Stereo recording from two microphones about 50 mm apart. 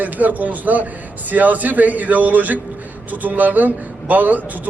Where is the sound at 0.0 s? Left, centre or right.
Right.